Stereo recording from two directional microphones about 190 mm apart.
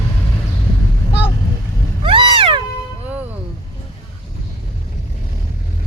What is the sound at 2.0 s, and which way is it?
Cat, 25° right (ahead or behind).